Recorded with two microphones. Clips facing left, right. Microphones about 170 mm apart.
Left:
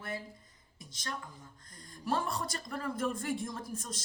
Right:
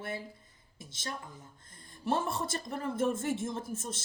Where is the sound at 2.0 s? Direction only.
25° right (ahead or behind).